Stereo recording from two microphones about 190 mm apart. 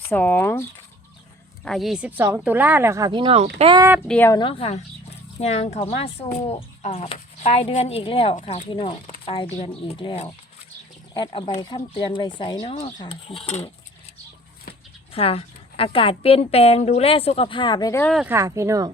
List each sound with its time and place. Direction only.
0.1 s speech: 10° left (ahead or behind)
1.6 s speech: centre (ahead or behind); by 3.8 s 25° right (ahead or behind)
4.0 s speech: 5° left (ahead or behind)
4.3 s a woman's voice: 25° left (ahead or behind)
8.4 s speech: 40° left (ahead or behind)
8.7 s a woman's voice: 30° left (ahead or behind)
15.1 s a woman's voice: 30° left (ahead or behind)
18.0 s speech: centre (ahead or behind)
18.3 s speech: 15° right (ahead or behind)